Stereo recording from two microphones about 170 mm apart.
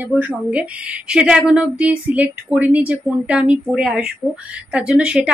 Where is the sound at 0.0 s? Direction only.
10° right (ahead or behind).